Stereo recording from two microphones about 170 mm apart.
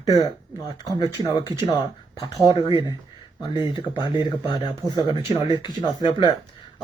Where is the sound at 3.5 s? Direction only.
25° left (ahead or behind).